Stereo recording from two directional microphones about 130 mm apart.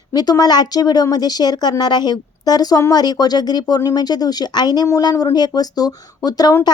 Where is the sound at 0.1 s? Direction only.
30° left (ahead or behind).